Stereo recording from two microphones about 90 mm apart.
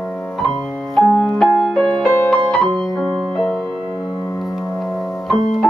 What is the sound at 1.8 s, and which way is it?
Music, 10° left (ahead or behind).